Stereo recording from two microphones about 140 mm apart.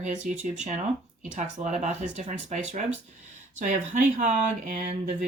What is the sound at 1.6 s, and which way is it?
Speech, 65° right (ahead or behind).